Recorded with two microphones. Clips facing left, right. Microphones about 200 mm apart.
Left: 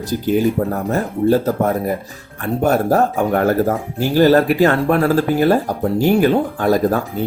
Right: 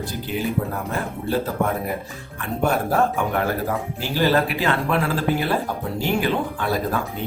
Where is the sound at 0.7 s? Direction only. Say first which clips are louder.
Left 7 dB; 45° left (ahead or behind).